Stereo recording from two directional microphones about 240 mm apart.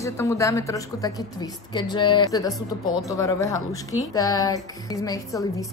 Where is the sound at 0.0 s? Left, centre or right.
Centre.